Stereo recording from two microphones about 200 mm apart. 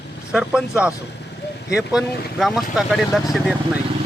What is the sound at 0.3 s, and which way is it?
Speech, 5° right (ahead or behind).